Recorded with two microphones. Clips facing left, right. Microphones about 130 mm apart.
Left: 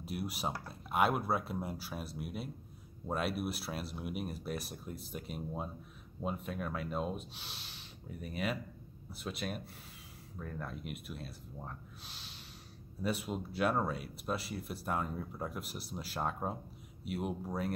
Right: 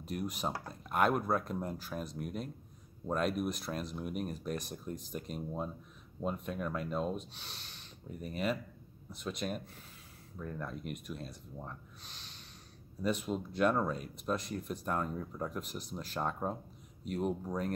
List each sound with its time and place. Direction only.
0.0 s speech: 5° left (ahead or behind)
10.6 s speech: 5° left (ahead or behind)